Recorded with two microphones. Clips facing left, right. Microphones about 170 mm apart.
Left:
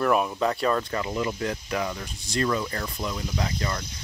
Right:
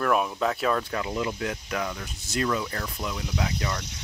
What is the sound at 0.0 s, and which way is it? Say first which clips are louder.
Speech: left 1 dB; centre (ahead or behind).